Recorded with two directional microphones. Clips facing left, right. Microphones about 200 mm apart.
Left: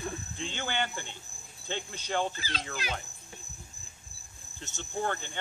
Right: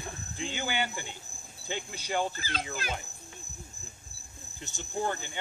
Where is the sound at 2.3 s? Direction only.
50° right (ahead or behind).